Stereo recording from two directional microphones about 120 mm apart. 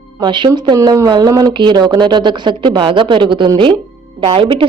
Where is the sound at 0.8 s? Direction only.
30° right (ahead or behind).